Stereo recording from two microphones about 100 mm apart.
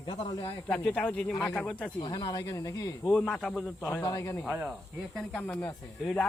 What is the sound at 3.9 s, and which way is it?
Speech, 35° left (ahead or behind).